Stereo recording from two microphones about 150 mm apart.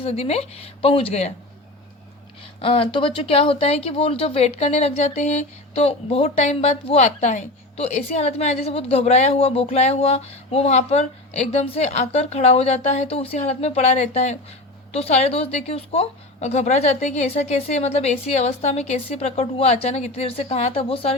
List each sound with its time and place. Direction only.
0.0 s speech: 45° left (ahead or behind)
2.6 s speech: 35° left (ahead or behind)